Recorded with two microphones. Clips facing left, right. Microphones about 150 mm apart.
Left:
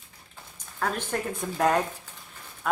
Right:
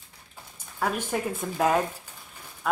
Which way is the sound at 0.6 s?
10° right (ahead or behind).